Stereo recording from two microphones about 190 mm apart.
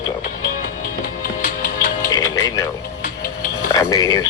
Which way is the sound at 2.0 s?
15° left (ahead or behind).